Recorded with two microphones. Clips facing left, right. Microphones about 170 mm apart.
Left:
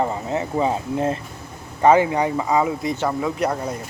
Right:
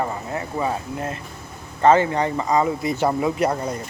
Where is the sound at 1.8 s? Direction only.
10° left (ahead or behind).